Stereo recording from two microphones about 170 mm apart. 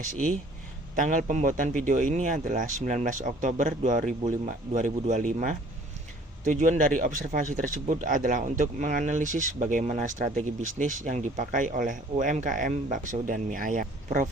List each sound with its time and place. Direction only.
0.9 s speech: 50° right (ahead or behind)